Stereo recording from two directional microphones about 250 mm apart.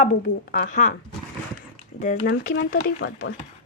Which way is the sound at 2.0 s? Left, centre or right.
Left.